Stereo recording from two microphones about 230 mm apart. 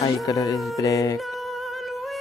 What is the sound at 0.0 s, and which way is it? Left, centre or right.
Speech, centre.